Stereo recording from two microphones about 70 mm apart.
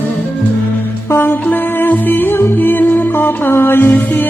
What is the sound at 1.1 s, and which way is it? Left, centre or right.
Music, left.